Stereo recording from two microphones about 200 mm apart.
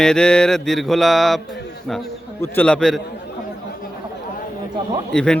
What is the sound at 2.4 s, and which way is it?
Speech, 10° left (ahead or behind).